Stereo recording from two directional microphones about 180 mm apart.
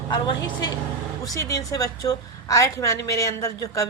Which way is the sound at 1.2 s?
20° left (ahead or behind).